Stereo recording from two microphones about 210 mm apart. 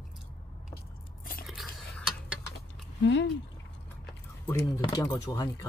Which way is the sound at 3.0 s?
60° left (ahead or behind).